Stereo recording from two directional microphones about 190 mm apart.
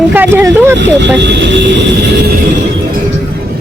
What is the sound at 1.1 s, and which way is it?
Speech, 65° right (ahead or behind).